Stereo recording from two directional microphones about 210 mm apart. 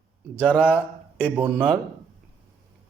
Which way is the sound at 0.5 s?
10° left (ahead or behind).